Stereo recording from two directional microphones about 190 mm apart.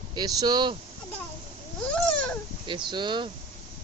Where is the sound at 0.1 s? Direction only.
20° right (ahead or behind).